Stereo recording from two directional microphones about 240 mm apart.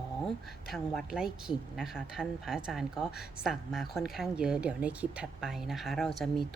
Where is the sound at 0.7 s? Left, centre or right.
Centre.